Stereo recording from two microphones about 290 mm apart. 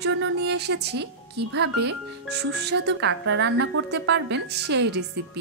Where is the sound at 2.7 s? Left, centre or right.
Right.